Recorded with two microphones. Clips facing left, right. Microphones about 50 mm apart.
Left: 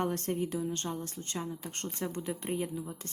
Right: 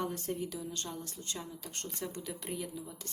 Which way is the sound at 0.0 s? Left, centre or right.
Left.